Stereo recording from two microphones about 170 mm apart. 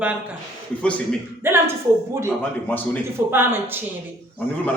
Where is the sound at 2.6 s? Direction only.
10° left (ahead or behind).